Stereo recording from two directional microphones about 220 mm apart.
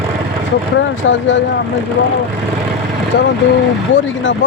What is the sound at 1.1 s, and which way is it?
Speech, 55° left (ahead or behind).